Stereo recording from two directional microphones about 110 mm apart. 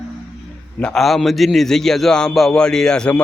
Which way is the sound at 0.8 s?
5° left (ahead or behind).